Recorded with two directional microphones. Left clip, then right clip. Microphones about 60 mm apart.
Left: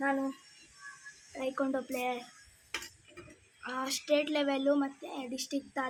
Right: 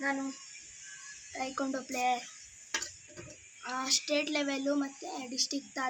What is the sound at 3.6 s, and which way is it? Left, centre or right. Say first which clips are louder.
A woman's voice: right 4 dB; left.